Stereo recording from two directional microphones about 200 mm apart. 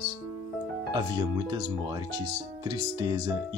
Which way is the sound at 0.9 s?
20° right (ahead or behind).